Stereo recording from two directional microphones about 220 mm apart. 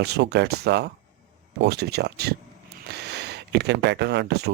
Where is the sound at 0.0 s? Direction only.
50° right (ahead or behind).